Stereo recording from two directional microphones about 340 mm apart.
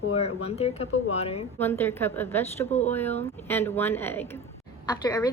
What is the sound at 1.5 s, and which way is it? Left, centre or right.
A woman's voice, centre.